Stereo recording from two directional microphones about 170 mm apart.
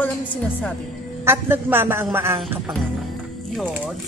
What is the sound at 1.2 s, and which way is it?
A man's voice, 15° right (ahead or behind).